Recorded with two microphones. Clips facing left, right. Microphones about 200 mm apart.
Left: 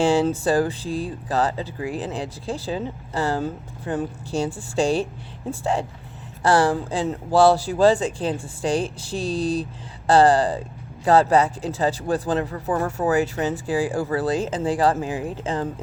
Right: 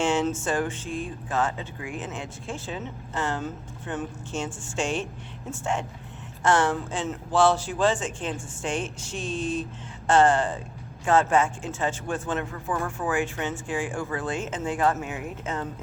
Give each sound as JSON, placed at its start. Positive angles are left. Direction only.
{"t": 0.0, "sound": "speech", "side_deg": 35}